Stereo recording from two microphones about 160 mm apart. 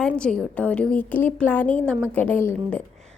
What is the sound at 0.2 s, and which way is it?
A woman's voice, 5° left (ahead or behind).